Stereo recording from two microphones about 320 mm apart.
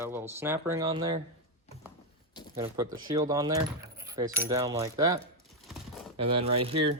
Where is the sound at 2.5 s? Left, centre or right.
Centre.